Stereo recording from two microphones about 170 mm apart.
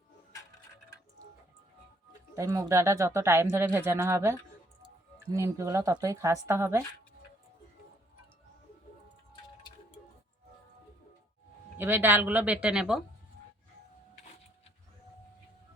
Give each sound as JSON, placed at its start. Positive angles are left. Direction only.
{"t": 2.3, "sound": "speech", "side_deg": -20}
{"t": 11.8, "sound": "speech", "side_deg": -10}